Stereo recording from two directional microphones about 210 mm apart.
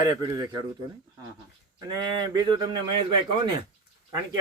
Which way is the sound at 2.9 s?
20° right (ahead or behind).